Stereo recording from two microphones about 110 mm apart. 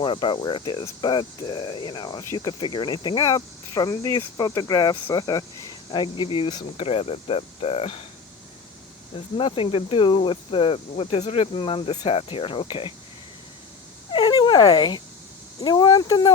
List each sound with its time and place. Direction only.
0.0 s speech: 45° left (ahead or behind)
5.9 s speech: 45° left (ahead or behind)
6.8 s speech: 65° left (ahead or behind)
9.1 s speech: 55° left (ahead or behind)
14.1 s dog: 45° left (ahead or behind)
15.6 s speech: 40° left (ahead or behind)